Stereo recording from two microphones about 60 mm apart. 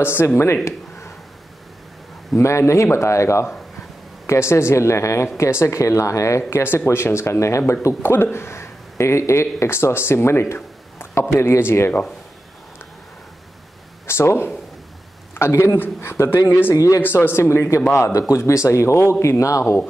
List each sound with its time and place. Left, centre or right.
0.0 s speech: left
2.3 s a man's voice: left
6.9 s a man's voice: left
8.0 s speech: left
14.0 s a man's voice: left
16.7 s speech: left
17.0 s a man's voice: left